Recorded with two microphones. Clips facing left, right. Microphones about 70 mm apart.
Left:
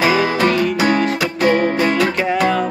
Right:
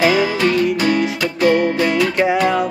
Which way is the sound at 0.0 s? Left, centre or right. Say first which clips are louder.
Even; left.